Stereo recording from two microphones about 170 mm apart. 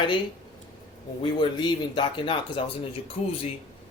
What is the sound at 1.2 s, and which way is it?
Speech, 25° left (ahead or behind).